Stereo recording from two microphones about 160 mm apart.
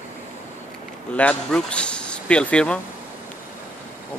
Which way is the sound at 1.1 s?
10° left (ahead or behind).